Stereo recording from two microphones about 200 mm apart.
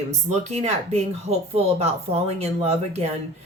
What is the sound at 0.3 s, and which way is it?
Speech, 35° right (ahead or behind).